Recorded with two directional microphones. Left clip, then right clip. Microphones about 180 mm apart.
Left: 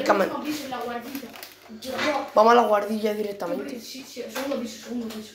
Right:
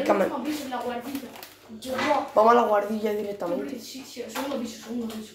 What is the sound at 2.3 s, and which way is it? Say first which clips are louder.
Speech: left 3 dB; 5° left (ahead or behind).